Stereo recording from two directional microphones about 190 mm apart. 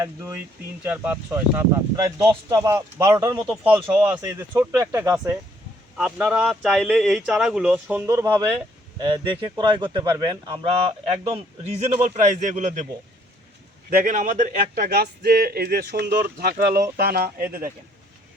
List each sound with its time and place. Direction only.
0.0 s speech: 15° right (ahead or behind)
4.1 s speech: 15° right (ahead or behind)
11.8 s a man's voice: 40° right (ahead or behind)
13.9 s speech: 45° right (ahead or behind)